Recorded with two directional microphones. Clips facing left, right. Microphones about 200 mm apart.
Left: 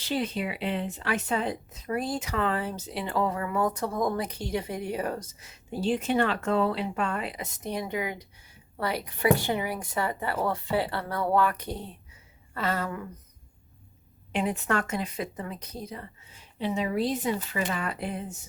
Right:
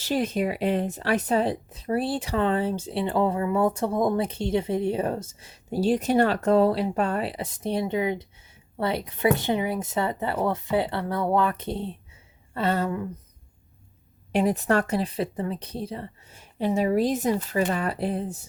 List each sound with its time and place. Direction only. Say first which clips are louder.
0.0 s a woman's voice: right 5 dB; 45° right (ahead or behind); by 13.1 s 25° right (ahead or behind)
14.3 s speech: right 6 dB; 40° right (ahead or behind)
16.3 s speech: right 5 dB; 45° right (ahead or behind)